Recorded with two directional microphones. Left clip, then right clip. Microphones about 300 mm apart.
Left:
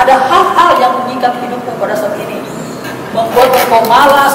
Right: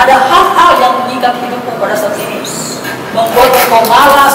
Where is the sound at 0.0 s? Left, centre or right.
Centre.